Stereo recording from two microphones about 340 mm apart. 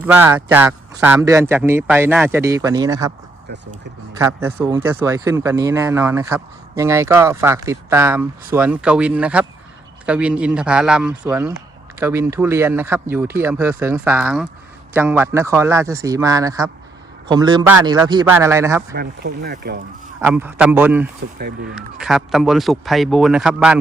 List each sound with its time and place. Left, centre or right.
0.0 s speech: centre
4.2 s speech: centre
18.9 s speech: right
20.2 s speech: centre
21.3 s speech: right
21.8 s speech: centre